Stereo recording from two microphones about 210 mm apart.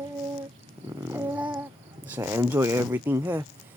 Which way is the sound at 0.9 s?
10° right (ahead or behind).